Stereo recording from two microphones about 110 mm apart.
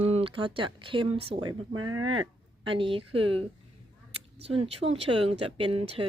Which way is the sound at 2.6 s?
50° right (ahead or behind).